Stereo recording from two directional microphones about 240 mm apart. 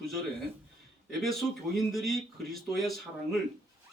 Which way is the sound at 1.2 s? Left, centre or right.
Centre.